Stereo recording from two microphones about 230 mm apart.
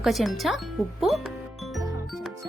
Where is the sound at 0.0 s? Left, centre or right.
Centre.